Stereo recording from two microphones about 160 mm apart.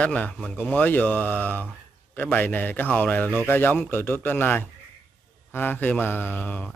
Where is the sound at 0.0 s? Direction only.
5° left (ahead or behind).